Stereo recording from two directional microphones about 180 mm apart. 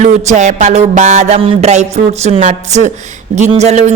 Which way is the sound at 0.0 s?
40° right (ahead or behind).